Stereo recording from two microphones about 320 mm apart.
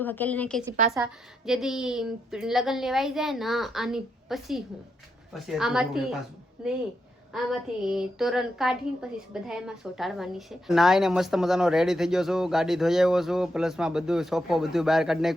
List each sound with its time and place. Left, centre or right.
0.0 s speech: centre